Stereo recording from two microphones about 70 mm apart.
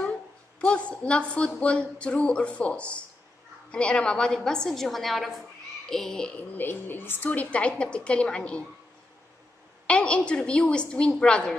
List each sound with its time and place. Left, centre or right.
0.6 s a woman's voice: centre
6.5 s a woman's voice: left
9.8 s a woman's voice: centre